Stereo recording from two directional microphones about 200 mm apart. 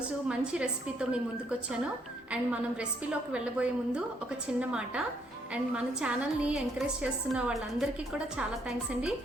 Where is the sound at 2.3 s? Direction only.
5° right (ahead or behind).